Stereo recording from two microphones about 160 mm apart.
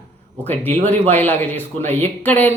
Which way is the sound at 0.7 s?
45° right (ahead or behind).